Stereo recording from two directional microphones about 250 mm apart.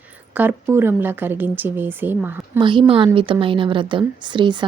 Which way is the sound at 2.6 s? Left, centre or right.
Centre.